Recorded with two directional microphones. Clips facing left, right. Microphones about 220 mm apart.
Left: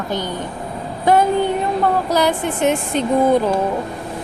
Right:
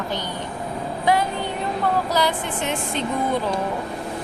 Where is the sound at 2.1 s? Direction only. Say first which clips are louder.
Left 5 dB; 50° left (ahead or behind).